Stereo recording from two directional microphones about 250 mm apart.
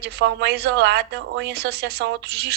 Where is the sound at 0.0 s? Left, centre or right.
Right.